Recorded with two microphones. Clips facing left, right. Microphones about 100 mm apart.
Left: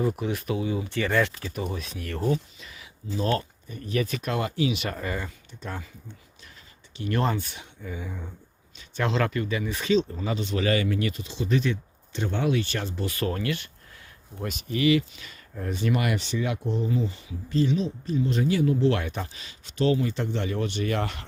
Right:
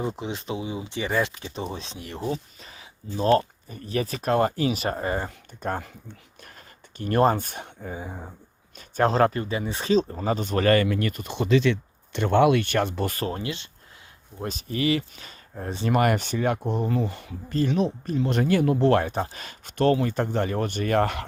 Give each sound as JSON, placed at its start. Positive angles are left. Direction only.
{"t": 0.0, "sound": "speech", "side_deg": -20}
{"t": 2.6, "sound": "a sound", "side_deg": -35}
{"t": 3.2, "sound": "speech", "side_deg": -35}
{"t": 7.9, "sound": "speech", "side_deg": -35}
{"t": 11.4, "sound": "speech", "side_deg": -90}
{"t": 13.1, "sound": "speech", "side_deg": -25}
{"t": 14.4, "sound": "speech", "side_deg": -35}
{"t": 15.9, "sound": "speech", "side_deg": -45}
{"t": 18.9, "sound": "speech", "side_deg": -35}
{"t": 19.4, "sound": "speech", "side_deg": -50}